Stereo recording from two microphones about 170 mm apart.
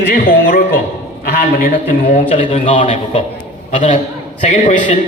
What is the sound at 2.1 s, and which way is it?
A man's voice, 40° left (ahead or behind).